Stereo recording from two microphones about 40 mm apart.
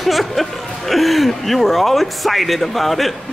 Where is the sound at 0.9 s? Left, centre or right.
Centre.